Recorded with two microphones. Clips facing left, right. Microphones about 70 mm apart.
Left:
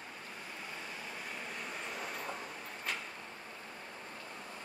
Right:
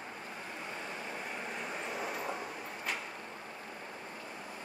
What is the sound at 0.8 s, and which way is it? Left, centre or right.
Vehicle, right.